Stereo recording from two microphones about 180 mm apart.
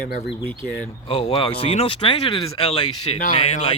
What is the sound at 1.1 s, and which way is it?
Speech, 35° left (ahead or behind).